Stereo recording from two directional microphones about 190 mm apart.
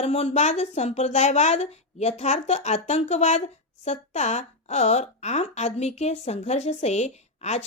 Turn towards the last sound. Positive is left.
turn(degrees=35)  # may be behind; listen again after turning